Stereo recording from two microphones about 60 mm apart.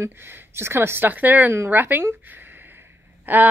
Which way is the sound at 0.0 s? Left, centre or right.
Right.